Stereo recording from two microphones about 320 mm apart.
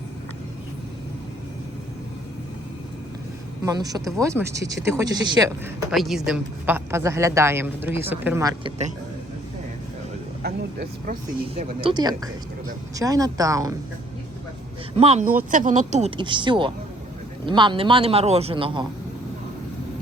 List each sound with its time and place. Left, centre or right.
3.6 s a woman's voice: centre
10.4 s a woman's voice: right; by 13.7 s centre
14.9 s a woman's voice: centre